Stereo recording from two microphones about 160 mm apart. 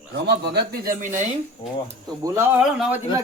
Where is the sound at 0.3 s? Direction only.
90° right.